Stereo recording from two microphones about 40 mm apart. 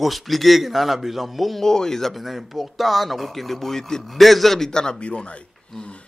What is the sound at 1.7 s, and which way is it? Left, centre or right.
A man's voice, centre.